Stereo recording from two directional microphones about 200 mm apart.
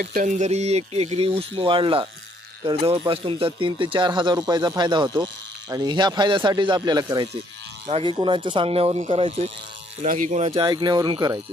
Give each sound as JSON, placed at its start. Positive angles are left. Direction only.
{"t": 0.0, "sound": "speech", "side_deg": -45}